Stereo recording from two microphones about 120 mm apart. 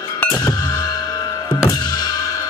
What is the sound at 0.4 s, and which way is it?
Music, 35° left (ahead or behind).